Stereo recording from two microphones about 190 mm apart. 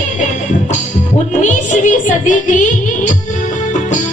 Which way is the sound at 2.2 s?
40° left (ahead or behind).